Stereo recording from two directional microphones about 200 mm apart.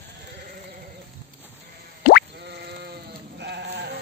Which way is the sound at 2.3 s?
55° right (ahead or behind).